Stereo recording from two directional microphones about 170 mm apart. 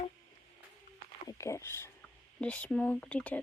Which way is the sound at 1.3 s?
15° left (ahead or behind).